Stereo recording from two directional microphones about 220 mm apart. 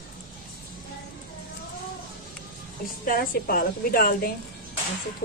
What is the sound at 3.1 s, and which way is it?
A woman's voice, 40° left (ahead or behind).